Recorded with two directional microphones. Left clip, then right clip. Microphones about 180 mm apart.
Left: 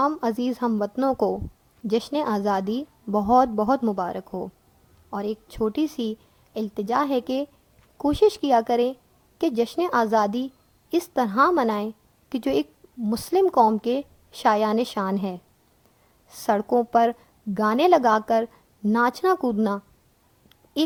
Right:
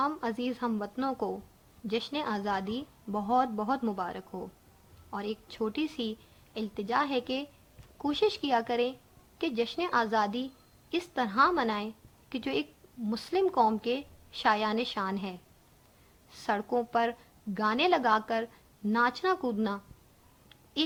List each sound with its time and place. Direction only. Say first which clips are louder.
0.0 s a woman's voice: left 8 dB; 55° left (ahead or behind)
1.1 s speech: left 11 dB; 30° left (ahead or behind)
1.9 s a woman's voice: left 8 dB; 60° left (ahead or behind)